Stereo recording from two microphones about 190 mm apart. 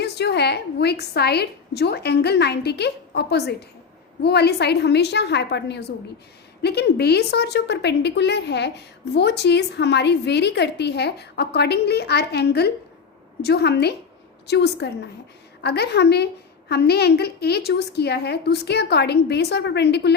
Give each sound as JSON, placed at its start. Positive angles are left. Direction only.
{"t": 0.0, "sound": "a woman's voice", "side_deg": 60}